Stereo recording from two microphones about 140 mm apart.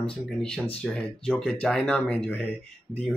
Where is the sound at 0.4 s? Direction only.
5° left (ahead or behind).